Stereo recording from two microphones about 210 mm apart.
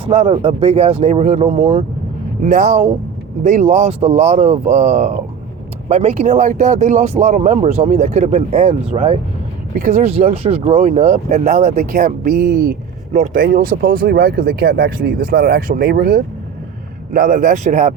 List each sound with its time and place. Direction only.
0.0 s speech: 25° right (ahead or behind)
2.4 s speech: 40° right (ahead or behind)